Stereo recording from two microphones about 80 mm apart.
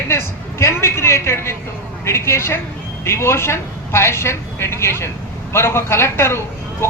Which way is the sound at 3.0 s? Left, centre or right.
Left.